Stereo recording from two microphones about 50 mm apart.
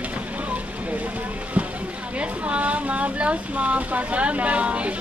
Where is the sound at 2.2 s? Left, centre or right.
Right.